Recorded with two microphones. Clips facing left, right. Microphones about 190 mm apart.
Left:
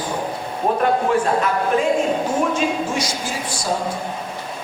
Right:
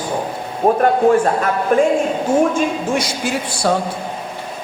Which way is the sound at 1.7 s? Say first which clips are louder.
Right 7 dB; 50° right (ahead or behind).